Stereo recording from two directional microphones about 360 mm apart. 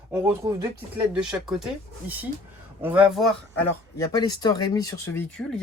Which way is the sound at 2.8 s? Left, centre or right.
Centre.